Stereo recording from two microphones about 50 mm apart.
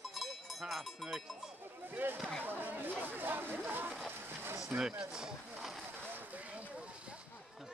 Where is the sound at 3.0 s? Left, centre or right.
Right.